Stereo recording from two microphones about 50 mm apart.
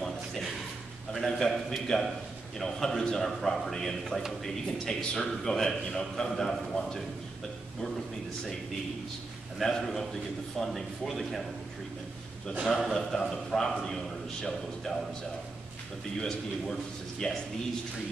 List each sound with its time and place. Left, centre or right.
0.0 s a sound: centre
1.1 s a man's voice: centre
9.6 s a man's voice: centre
12.6 s a man's voice: centre
16.2 s a man's voice: centre